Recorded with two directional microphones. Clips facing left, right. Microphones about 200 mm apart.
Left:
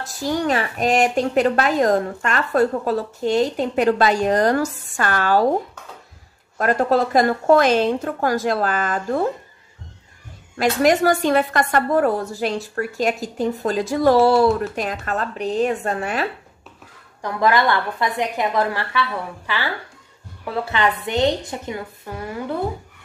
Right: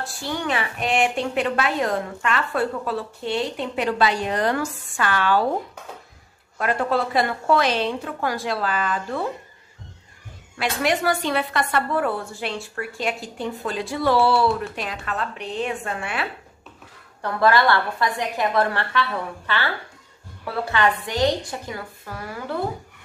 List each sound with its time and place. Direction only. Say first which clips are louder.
0.0 s a woman's voice: left 6 dB; 40° left (ahead or behind)
6.6 s a woman's voice: left 5 dB; 40° left (ahead or behind)
10.6 s a woman's voice: left 6 dB; 40° left (ahead or behind)
17.2 s a woman's voice: even; 15° left (ahead or behind)